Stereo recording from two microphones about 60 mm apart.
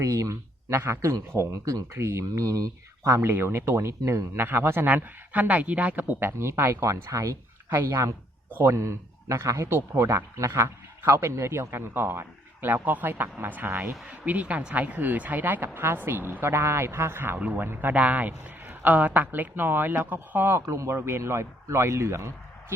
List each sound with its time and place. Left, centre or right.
0.0 s speech: right
2.0 s speech: right
2.3 s speech: right
3.2 s a man's voice: right
4.4 s speech: right
4.9 s a man's voice: right
6.8 s speech: right
7.7 s speech: right
8.6 s a man's voice: right
17.4 s speech: right
20.6 s a man's voice: right